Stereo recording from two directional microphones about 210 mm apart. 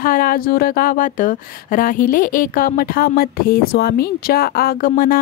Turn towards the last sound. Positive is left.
turn(degrees=40)  # may be behind; listen again after turning